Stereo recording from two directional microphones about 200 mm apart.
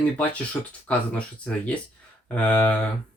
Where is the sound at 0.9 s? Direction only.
5° left (ahead or behind).